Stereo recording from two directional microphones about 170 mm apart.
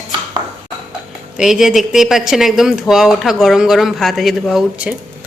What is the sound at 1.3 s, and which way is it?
Speech, centre (ahead or behind).